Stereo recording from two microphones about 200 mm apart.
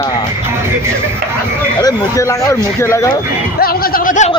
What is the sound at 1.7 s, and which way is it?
Speech, 15° left (ahead or behind).